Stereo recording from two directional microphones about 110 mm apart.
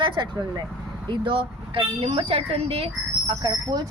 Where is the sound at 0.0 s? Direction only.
40° right (ahead or behind); by 2.9 s 60° right (ahead or behind).